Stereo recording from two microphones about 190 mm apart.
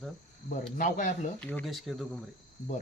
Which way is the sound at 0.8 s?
40° left (ahead or behind).